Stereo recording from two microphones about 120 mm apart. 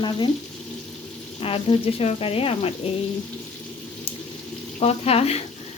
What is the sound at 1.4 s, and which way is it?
Speech, 50° left (ahead or behind).